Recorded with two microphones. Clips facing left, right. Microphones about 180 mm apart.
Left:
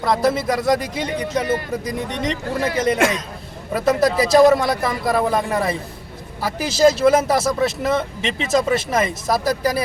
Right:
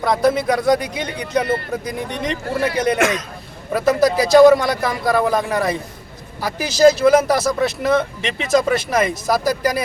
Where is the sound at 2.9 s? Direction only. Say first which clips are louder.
Even; 30° left (ahead or behind).